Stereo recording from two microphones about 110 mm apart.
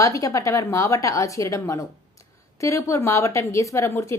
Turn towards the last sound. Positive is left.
turn(degrees=25)  # may be behind; listen again after turning